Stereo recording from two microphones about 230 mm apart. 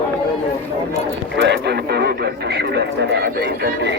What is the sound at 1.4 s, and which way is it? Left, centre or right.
Speech, right.